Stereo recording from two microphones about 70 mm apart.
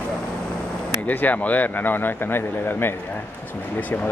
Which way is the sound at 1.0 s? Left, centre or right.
Left.